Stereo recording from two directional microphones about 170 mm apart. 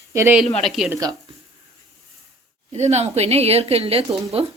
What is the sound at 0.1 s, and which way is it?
Speech, 15° right (ahead or behind).